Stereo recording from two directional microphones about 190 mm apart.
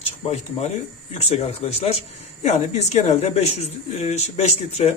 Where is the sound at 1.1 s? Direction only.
35° left (ahead or behind).